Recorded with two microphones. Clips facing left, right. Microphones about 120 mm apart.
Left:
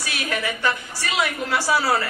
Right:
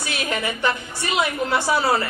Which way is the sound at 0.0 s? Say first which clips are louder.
Right 1 dB; 25° right (ahead or behind).